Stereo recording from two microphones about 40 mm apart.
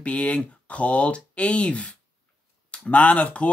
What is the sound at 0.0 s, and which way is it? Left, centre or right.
Speech, left.